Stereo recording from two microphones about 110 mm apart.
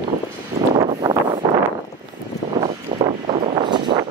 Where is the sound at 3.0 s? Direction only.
75° right (ahead or behind); by 3.7 s 60° right (ahead or behind).